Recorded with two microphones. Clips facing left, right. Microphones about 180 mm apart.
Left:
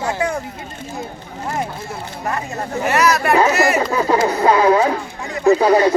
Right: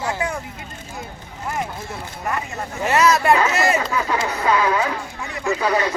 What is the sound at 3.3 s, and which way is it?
Speech, 25° left (ahead or behind).